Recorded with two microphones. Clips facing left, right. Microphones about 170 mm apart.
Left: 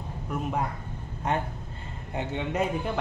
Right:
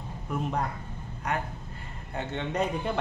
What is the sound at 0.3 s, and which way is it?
Speech, 5° left (ahead or behind).